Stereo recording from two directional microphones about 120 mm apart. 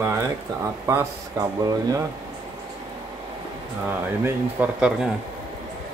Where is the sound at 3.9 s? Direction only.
15° right (ahead or behind).